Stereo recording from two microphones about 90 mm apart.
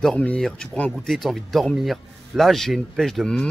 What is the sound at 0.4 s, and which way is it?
Speech, 10° left (ahead or behind).